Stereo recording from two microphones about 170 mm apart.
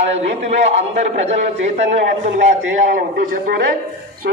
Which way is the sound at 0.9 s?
40° right (ahead or behind).